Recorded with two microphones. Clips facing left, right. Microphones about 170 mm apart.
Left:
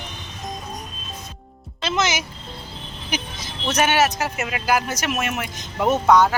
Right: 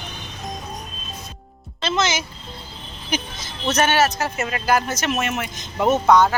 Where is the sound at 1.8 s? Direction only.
15° left (ahead or behind).